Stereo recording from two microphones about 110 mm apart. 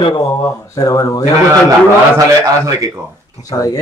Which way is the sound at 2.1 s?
30° right (ahead or behind).